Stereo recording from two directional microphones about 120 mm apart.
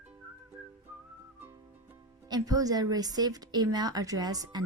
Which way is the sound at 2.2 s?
35° right (ahead or behind).